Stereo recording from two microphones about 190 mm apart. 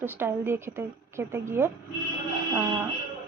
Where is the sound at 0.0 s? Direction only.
10° right (ahead or behind).